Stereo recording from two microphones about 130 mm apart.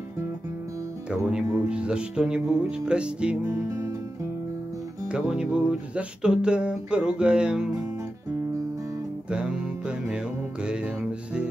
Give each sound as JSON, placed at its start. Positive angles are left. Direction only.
{"t": 1.1, "sound": "music", "side_deg": -5}
{"t": 3.4, "sound": "music", "side_deg": -20}
{"t": 5.0, "sound": "music", "side_deg": -5}
{"t": 9.3, "sound": "music", "side_deg": -5}